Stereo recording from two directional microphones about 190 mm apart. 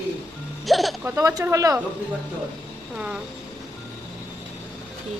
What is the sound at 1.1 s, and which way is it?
Speech, 15° right (ahead or behind).